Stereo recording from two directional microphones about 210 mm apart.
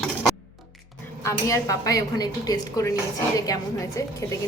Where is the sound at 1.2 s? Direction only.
15° left (ahead or behind).